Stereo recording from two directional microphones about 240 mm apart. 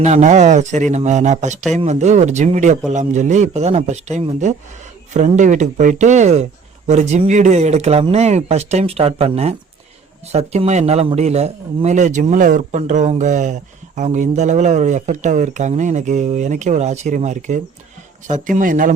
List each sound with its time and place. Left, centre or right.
0.0 s a man's voice: right